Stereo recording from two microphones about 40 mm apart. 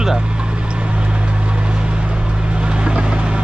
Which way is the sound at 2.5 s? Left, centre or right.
Right.